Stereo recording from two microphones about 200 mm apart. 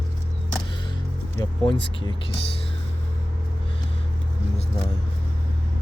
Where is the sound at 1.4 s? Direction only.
20° left (ahead or behind).